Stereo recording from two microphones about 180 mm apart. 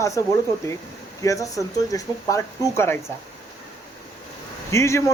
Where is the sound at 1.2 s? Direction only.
20° left (ahead or behind).